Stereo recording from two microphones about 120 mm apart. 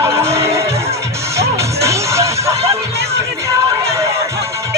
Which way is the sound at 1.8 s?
25° right (ahead or behind).